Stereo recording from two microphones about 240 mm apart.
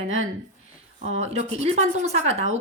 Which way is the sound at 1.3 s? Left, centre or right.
Right.